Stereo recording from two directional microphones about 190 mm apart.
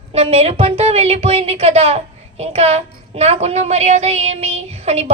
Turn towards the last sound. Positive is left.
turn(degrees=-35)  # may be behind; listen again after turning